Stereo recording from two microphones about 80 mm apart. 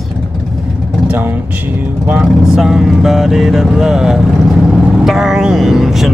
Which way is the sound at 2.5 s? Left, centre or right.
Centre.